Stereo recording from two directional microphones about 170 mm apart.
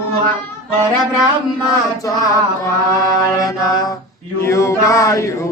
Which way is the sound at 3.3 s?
20° left (ahead or behind).